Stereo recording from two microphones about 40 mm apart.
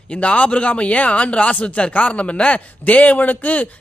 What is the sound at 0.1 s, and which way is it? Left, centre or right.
Speech, left.